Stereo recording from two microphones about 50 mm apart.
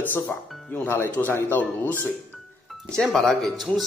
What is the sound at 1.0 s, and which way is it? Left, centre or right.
Speech, left.